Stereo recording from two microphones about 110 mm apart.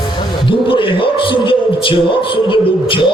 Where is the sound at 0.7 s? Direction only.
50° left (ahead or behind).